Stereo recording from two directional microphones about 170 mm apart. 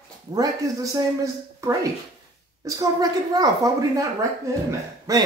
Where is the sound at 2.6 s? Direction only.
25° right (ahead or behind).